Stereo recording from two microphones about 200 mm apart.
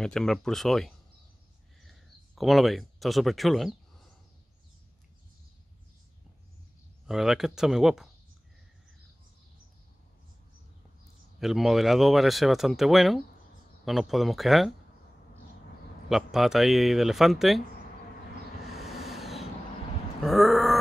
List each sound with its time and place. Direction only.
0.0 s speech: 5° left (ahead or behind)
7.1 s speech: centre (ahead or behind)
11.3 s speech: centre (ahead or behind)
16.1 s speech: centre (ahead or behind)
18.8 s a sound: centre (ahead or behind)